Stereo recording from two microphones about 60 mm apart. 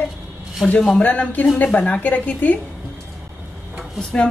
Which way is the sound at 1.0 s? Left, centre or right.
Left.